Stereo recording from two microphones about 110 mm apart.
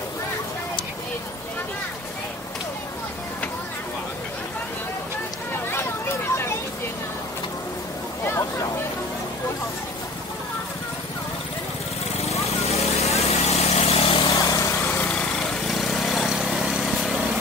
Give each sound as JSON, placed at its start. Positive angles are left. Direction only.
{"t": 12.3, "sound": "vehicle", "side_deg": 70}
{"t": 14.3, "sound": "vehicle", "side_deg": 30}
{"t": 15.0, "sound": "lawn mower", "side_deg": 5}